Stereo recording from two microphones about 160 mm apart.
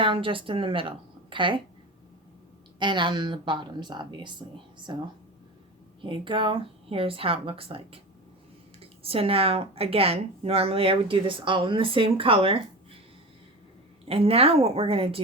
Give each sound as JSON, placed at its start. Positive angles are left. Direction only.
{"t": 0.0, "sound": "a woman's voice", "side_deg": -30}
{"t": 2.7, "sound": "a woman's voice", "side_deg": -30}
{"t": 8.8, "sound": "speech", "side_deg": -35}
{"t": 14.0, "sound": "speech", "side_deg": -35}